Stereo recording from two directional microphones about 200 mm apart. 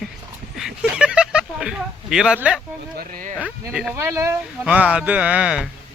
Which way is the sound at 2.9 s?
45° right (ahead or behind).